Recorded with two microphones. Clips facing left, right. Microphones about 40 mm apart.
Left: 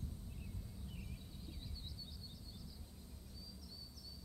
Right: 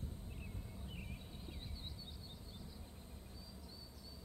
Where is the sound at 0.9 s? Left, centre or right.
Right.